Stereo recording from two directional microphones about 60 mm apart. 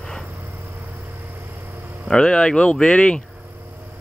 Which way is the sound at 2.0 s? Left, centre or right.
Centre.